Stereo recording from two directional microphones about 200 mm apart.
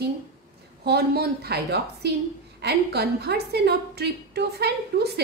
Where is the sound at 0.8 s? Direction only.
50° right (ahead or behind).